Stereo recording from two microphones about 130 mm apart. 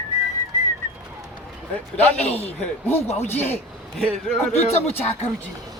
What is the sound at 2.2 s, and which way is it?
Speech, 55° left (ahead or behind).